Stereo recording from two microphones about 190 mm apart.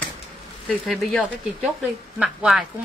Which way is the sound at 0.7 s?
Centre (ahead or behind).